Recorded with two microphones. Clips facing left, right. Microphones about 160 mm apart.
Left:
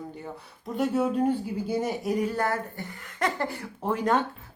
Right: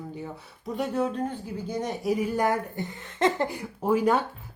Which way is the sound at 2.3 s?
15° right (ahead or behind).